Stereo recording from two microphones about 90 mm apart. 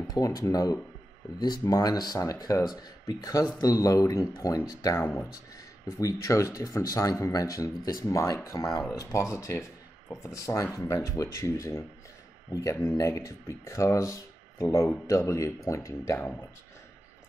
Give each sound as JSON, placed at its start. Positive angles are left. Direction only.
{"t": 0.1, "sound": "speech", "side_deg": 45}